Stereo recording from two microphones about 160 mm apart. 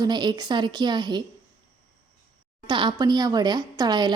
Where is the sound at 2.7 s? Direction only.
30° right (ahead or behind).